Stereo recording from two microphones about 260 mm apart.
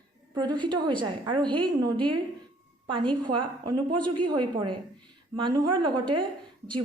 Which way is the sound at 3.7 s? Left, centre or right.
Right.